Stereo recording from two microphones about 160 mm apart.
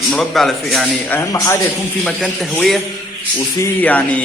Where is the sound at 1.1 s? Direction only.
20° left (ahead or behind).